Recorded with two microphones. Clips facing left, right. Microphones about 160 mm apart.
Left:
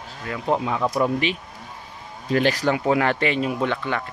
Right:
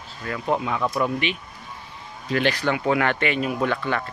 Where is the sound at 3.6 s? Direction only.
15° left (ahead or behind).